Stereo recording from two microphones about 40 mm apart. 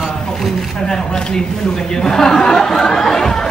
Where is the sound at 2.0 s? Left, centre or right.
Centre.